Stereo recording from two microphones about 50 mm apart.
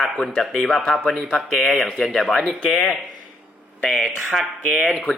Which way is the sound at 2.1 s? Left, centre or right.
Centre.